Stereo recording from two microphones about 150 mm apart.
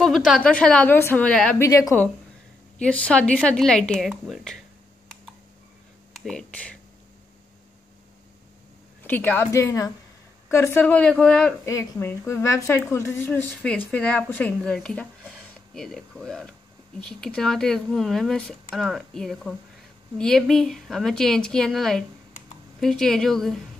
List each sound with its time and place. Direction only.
0.0 s a woman's voice: centre (ahead or behind)
1.6 s a woman's voice: 20° left (ahead or behind)
2.8 s speech: 10° left (ahead or behind)
6.1 s speech: 5° left (ahead or behind)
9.0 s a woman's voice: 10° left (ahead or behind)
11.6 s a woman's voice: 20° left (ahead or behind); by 23.6 s centre (ahead or behind)